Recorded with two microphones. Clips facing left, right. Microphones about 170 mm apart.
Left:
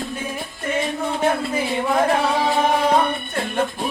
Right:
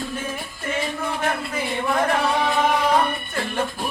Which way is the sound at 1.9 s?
25° left (ahead or behind).